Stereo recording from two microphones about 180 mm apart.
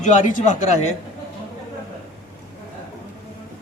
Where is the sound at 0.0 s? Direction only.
45° left (ahead or behind).